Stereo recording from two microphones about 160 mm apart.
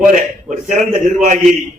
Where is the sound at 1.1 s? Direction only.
50° right (ahead or behind).